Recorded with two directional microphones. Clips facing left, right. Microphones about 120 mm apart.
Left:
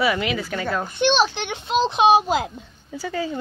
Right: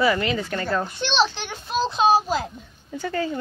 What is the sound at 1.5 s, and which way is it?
Speech, 20° left (ahead or behind).